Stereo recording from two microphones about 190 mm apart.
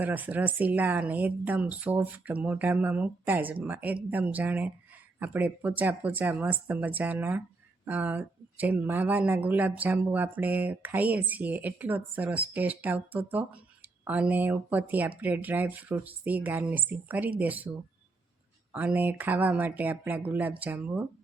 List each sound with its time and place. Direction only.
0.0 s speech: 10° right (ahead or behind)
18.7 s speech: 10° right (ahead or behind)